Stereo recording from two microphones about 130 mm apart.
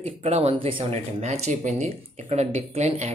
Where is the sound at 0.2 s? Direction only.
55° right (ahead or behind).